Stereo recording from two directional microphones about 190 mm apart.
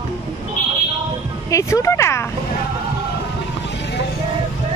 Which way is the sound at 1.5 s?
15° left (ahead or behind).